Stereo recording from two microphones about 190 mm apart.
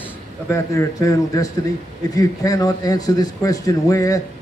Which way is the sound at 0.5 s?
15° left (ahead or behind).